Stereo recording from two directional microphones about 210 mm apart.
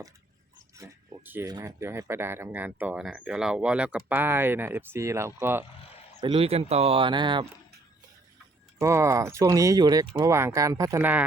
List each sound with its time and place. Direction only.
0.8 s speech: 10° right (ahead or behind)
6.1 s speech: 25° right (ahead or behind)
8.8 s speech: 15° right (ahead or behind)